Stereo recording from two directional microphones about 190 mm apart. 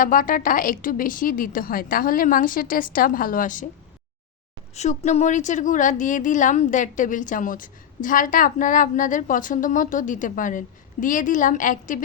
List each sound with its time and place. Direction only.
0.0 s a woman's voice: 45° left (ahead or behind)
4.7 s a woman's voice: 35° left (ahead or behind)